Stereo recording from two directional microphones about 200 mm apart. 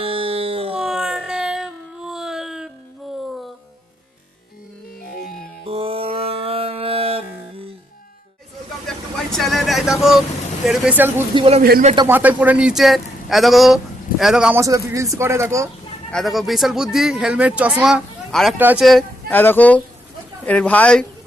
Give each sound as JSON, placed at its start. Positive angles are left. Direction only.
{"t": 0.0, "sound": "music", "side_deg": -25}
{"t": 0.8, "sound": "a sound", "side_deg": 0}
{"t": 5.6, "sound": "music", "side_deg": -30}
{"t": 8.9, "sound": "vehicle", "side_deg": 0}
{"t": 10.7, "sound": "speech", "side_deg": -5}
{"t": 11.3, "sound": "speech", "side_deg": -30}
{"t": 11.6, "sound": "a man's voice", "side_deg": -50}
{"t": 12.0, "sound": "speech", "side_deg": -10}
{"t": 14.6, "sound": "speech", "side_deg": -15}
{"t": 16.1, "sound": "speech", "side_deg": 0}